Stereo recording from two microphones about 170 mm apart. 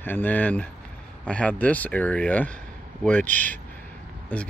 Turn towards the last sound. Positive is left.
turn(degrees=10)  # may be behind; listen again after turning